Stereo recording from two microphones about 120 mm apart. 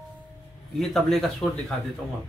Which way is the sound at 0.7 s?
Centre (ahead or behind).